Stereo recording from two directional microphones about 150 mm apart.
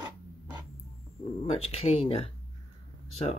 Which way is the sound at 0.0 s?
10° right (ahead or behind).